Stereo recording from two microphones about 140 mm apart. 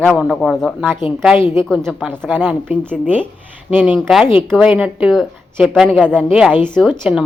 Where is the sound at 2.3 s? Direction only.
10° right (ahead or behind).